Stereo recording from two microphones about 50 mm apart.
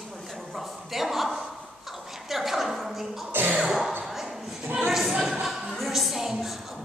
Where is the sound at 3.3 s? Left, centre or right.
Right.